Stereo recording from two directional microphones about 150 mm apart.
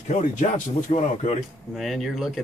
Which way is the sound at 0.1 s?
55° left (ahead or behind).